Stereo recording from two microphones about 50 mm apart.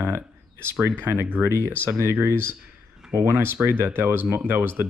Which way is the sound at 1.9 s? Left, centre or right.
Right.